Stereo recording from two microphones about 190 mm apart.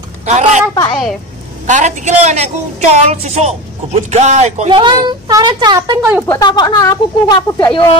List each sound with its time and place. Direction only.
0.3 s a woman's voice: 35° right (ahead or behind)
1.7 s a woman's voice: 40° right (ahead or behind); by 6.2 s 15° right (ahead or behind)
6.2 s speech: 20° left (ahead or behind)